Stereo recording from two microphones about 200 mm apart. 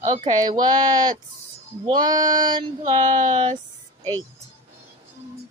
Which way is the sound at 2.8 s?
35° right (ahead or behind).